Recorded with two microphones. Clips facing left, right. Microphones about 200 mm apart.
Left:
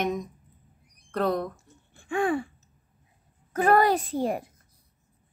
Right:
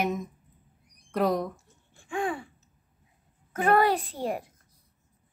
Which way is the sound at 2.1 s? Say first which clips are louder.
Left 5 dB; 55° left (ahead or behind).